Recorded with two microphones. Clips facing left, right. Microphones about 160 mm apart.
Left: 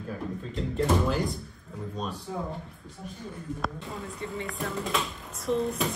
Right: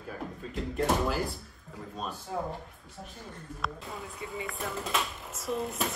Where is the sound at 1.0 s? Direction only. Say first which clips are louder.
Left 3 dB; 5° right (ahead or behind).